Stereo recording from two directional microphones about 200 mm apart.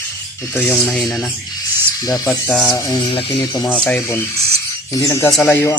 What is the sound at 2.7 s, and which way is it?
Speech, 20° left (ahead or behind).